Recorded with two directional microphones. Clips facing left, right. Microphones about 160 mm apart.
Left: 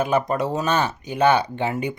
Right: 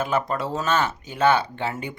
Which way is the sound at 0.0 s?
15° left (ahead or behind).